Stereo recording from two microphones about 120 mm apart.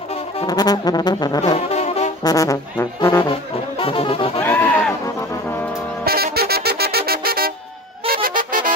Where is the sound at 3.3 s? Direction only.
50° left (ahead or behind).